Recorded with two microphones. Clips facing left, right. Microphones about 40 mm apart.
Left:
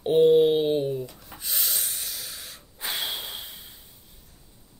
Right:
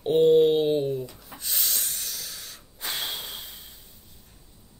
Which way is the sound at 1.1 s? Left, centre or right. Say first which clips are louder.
Even; centre.